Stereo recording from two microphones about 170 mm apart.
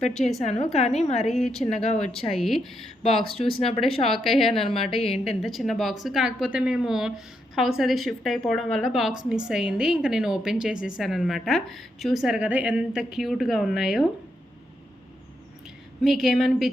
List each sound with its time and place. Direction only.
0.1 s a woman's voice: centre (ahead or behind)
0.4 s speech: 40° left (ahead or behind)
1.3 s a woman's voice: centre (ahead or behind)
3.2 s speech: 30° left (ahead or behind)
4.0 s a woman's voice: centre (ahead or behind)
4.9 s speech: 35° left (ahead or behind)
5.4 s a woman's voice: centre (ahead or behind)
16.0 s a woman's voice: centre (ahead or behind)